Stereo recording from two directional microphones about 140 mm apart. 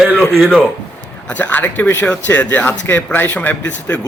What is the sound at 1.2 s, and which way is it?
A man's voice, 10° left (ahead or behind).